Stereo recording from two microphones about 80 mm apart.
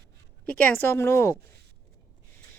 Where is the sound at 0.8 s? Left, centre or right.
Left.